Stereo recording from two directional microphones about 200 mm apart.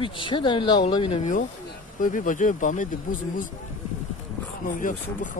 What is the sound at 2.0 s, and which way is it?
Speech, 40° left (ahead or behind).